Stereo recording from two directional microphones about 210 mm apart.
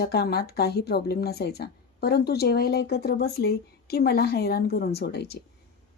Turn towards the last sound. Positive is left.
turn(degrees=50)  # may be behind; listen again after turning